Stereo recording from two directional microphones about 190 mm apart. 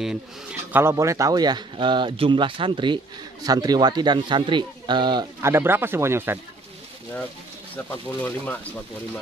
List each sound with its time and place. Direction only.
0.0 s speech: 5° right (ahead or behind)
7.7 s speech: 10° left (ahead or behind)